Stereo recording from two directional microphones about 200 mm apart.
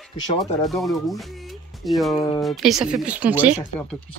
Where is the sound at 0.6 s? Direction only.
Centre (ahead or behind).